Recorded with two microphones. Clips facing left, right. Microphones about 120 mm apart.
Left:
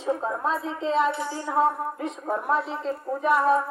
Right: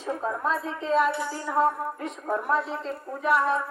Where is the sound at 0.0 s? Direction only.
25° left (ahead or behind).